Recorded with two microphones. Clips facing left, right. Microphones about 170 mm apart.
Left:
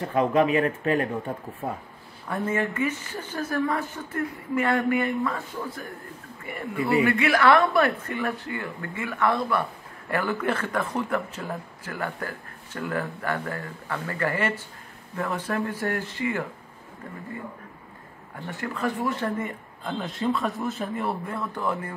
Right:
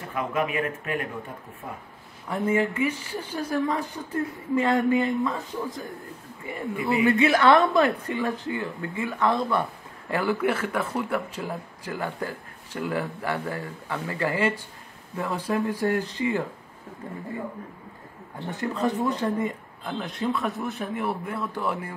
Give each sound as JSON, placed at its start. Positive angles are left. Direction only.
{"t": 0.1, "sound": "speech", "side_deg": 30}
{"t": 2.2, "sound": "a woman's voice", "side_deg": -15}
{"t": 18.5, "sound": "a woman's voice", "side_deg": -20}
{"t": 19.8, "sound": "a man's voice", "side_deg": 0}